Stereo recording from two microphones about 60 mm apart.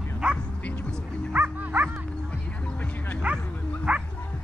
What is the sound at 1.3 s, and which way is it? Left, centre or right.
Music, right.